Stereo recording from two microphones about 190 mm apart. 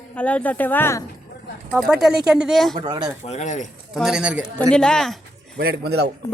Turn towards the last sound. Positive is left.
turn(degrees=-60)  # may be behind; listen again after turning